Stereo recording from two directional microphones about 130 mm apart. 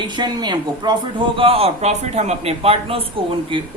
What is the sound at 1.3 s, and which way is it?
A man's voice, 45° right (ahead or behind).